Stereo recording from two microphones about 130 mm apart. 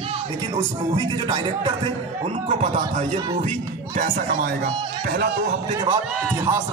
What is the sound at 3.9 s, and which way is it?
Speech, 90° right.